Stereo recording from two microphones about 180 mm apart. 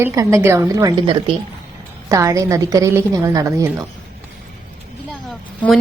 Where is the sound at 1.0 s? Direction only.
30° right (ahead or behind).